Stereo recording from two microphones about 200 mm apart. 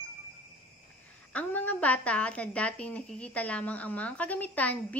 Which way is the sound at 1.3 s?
10° left (ahead or behind).